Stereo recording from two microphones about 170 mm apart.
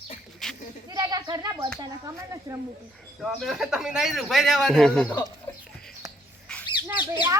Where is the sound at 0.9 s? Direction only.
20° right (ahead or behind).